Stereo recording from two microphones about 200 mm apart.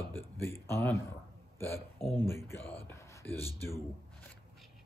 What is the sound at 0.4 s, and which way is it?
Speech, 10° left (ahead or behind).